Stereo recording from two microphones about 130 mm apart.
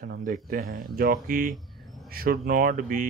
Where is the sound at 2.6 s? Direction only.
90° right.